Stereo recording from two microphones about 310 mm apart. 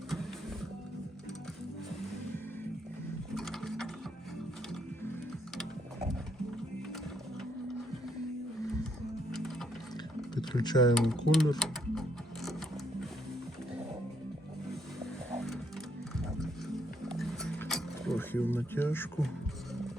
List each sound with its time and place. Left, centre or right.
3.3 s sewing machine: centre
9.3 s music: centre
10.3 s speech: centre
10.9 s speech: centre
11.6 s music: centre
17.1 s a sound: centre